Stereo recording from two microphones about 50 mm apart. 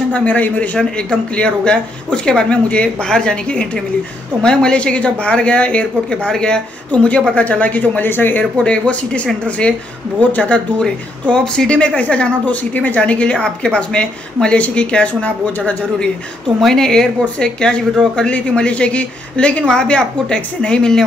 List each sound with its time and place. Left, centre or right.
0.1 s a woman's voice: left
0.7 s a woman's voice: centre; by 8.5 s left
8.6 s a woman's voice: left
11.2 s a woman's voice: centre
16.5 s a woman's voice: centre